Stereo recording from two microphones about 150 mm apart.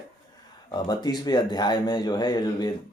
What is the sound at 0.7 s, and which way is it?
Speech, 30° left (ahead or behind).